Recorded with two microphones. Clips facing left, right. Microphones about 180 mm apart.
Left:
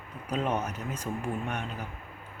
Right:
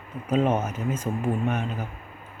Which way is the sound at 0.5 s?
5° right (ahead or behind).